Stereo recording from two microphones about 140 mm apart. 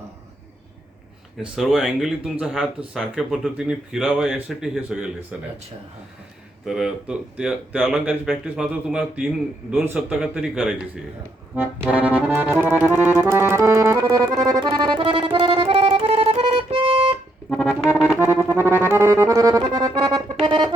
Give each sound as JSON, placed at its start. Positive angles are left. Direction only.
{"t": 1.4, "sound": "speech", "side_deg": -5}
{"t": 6.7, "sound": "speech", "side_deg": -5}
{"t": 11.5, "sound": "accordion", "side_deg": -15}
{"t": 18.1, "sound": "music", "side_deg": -15}
{"t": 18.6, "sound": "accordion", "side_deg": -15}
{"t": 19.9, "sound": "music", "side_deg": -30}